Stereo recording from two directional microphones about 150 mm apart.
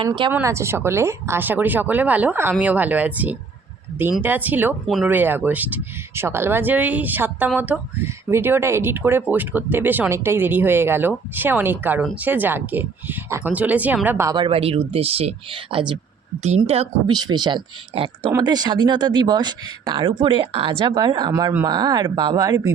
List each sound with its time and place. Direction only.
0.3 s speech: 15° right (ahead or behind)
14.3 s speech: 35° right (ahead or behind)
16.6 s speech: 45° right (ahead or behind)
17.1 s speech: 30° right (ahead or behind)